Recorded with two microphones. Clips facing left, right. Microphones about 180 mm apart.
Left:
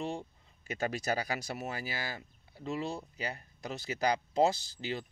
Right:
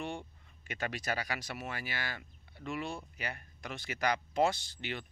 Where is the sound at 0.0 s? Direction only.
35° left (ahead or behind).